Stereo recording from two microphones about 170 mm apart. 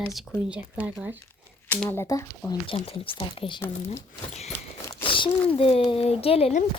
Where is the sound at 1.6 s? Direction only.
10° left (ahead or behind).